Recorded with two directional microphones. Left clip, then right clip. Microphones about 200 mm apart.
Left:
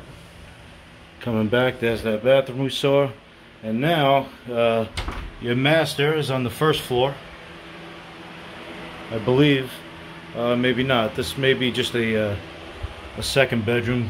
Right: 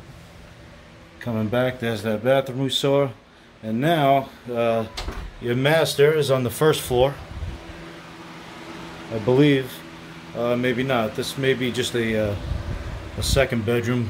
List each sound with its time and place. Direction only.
1.2 s speech: 5° left (ahead or behind)
2.0 s speech: 15° right (ahead or behind); by 4.8 s centre (ahead or behind)
5.4 s speech: 15° right (ahead or behind)
9.2 s speech: 10° right (ahead or behind)